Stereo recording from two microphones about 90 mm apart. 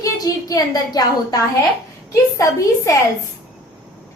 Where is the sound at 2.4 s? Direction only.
35° left (ahead or behind).